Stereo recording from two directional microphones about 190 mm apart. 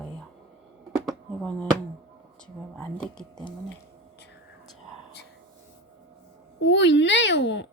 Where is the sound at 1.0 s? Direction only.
5° left (ahead or behind).